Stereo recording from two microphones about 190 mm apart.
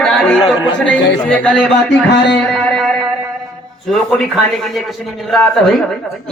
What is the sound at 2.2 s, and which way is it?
Speech, 65° left (ahead or behind).